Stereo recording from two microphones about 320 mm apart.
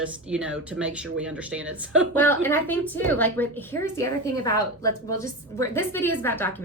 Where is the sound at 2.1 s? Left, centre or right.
Centre.